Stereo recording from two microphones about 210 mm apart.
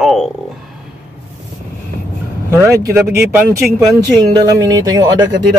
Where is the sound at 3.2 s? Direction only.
10° right (ahead or behind).